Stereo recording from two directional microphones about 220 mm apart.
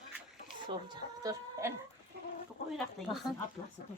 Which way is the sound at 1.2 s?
15° right (ahead or behind).